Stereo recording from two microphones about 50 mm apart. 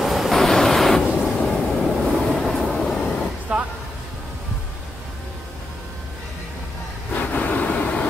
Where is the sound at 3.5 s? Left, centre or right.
Right.